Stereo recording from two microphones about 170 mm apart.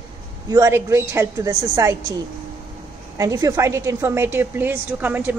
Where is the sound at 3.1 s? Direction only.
20° right (ahead or behind).